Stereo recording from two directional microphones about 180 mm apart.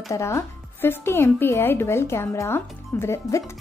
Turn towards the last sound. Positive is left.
turn(degrees=15)  # may be behind; listen again after turning